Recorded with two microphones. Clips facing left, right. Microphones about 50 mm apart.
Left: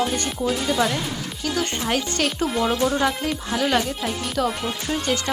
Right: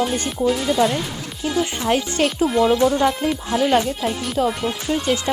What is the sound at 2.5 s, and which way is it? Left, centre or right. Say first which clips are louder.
Speech: right 6 dB; centre.